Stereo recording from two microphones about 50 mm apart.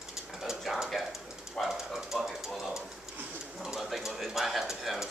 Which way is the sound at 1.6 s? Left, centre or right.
Centre.